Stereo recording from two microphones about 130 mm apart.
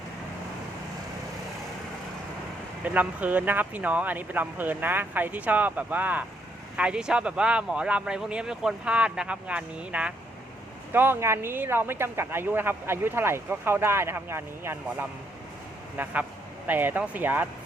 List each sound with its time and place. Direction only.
2.8 s speech: 10° right (ahead or behind)